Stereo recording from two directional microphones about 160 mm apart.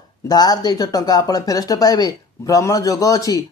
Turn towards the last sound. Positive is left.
turn(degrees=20)  # may be behind; listen again after turning